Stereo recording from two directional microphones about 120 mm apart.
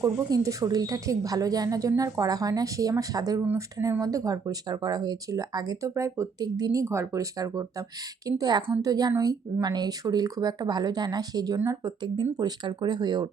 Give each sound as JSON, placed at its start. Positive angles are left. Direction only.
{"t": 0.0, "sound": "a woman's voice", "side_deg": -30}
{"t": 3.4, "sound": "speech", "side_deg": -15}
{"t": 4.0, "sound": "a woman's voice", "side_deg": -30}
{"t": 6.8, "sound": "a woman's voice", "side_deg": -20}